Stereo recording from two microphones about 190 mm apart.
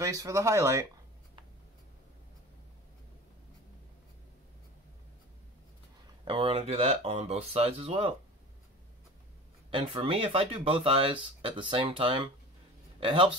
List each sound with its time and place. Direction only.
0.0 s speech: 15° right (ahead or behind)
6.2 s speech: 30° right (ahead or behind)
9.7 s speech: 30° right (ahead or behind)